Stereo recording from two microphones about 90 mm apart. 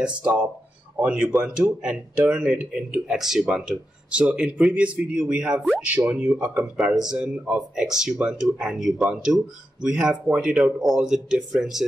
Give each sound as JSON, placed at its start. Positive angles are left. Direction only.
{"t": 0.0, "sound": "speech", "side_deg": -10}
{"t": 10.5, "sound": "speech", "side_deg": -5}